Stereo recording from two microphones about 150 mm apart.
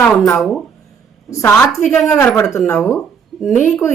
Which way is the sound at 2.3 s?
20° left (ahead or behind).